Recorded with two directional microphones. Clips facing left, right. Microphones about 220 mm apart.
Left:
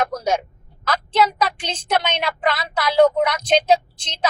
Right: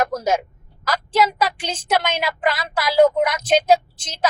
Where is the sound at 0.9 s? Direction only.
10° right (ahead or behind).